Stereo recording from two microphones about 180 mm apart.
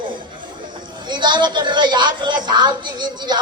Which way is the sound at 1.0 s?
25° right (ahead or behind).